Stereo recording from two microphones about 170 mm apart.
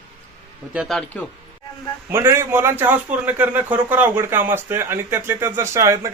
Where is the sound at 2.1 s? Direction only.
15° right (ahead or behind).